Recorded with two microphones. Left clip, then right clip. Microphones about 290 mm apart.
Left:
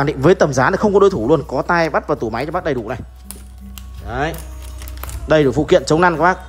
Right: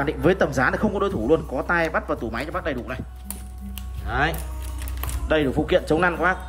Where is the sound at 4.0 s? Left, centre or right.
Centre.